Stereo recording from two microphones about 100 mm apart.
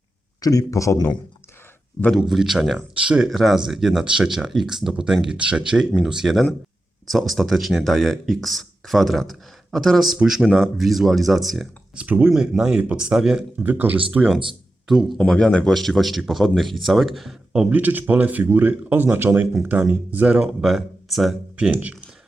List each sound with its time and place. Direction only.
0.4 s a man's voice: 35° left (ahead or behind)
2.1 s speech: centre (ahead or behind)
3.2 s speech: centre (ahead or behind)
10.4 s speech: 5° left (ahead or behind)
11.9 s speech: 15° right (ahead or behind)
12.3 s speech: 5° right (ahead or behind)
13.6 s speech: 20° right (ahead or behind)
14.8 s speech: 5° right (ahead or behind)
15.2 s speech: 10° left (ahead or behind)
17.5 s speech: 15° right (ahead or behind)
20.5 s speech: centre (ahead or behind)
21.5 s speech: 15° right (ahead or behind)